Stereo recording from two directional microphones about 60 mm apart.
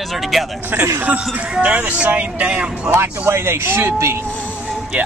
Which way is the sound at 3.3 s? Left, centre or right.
Right.